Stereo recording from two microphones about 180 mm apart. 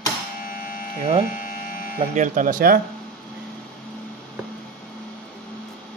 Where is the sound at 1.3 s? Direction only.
50° left (ahead or behind).